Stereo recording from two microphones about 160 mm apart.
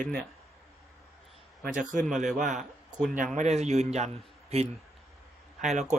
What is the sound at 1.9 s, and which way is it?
Speech, 55° right (ahead or behind).